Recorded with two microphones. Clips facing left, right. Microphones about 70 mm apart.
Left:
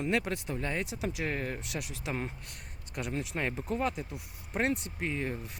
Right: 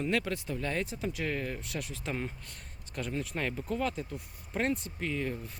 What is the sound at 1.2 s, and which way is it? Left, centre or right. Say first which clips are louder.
Speech: right 1 dB; left.